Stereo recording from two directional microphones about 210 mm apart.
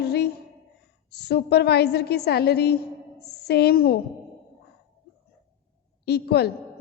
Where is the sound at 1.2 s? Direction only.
50° left (ahead or behind).